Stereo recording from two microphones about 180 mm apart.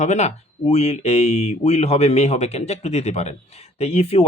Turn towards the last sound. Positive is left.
turn(degrees=35)  # may be behind; listen again after turning